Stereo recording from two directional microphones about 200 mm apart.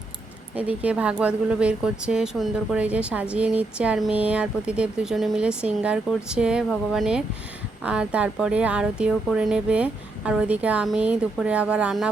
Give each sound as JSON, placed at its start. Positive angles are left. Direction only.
{"t": 0.5, "sound": "speech", "side_deg": -5}